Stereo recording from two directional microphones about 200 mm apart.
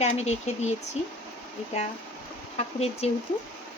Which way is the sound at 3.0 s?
30° left (ahead or behind).